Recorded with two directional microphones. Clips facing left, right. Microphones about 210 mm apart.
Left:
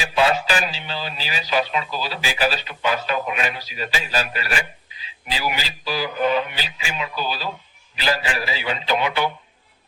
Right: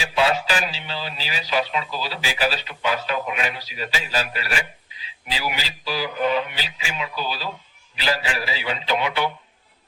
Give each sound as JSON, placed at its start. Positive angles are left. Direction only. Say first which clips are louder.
{"t": 0.0, "sound": "a man's voice", "louder": "left 2 dB", "side_deg": 45}